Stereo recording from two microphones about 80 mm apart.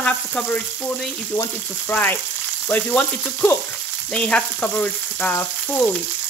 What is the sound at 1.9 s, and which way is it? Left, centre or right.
Speech, left.